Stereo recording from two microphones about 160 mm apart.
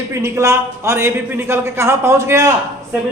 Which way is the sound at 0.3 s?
15° right (ahead or behind).